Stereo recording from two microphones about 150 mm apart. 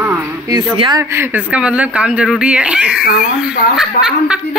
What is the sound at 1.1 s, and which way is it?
Speech, 15° right (ahead or behind).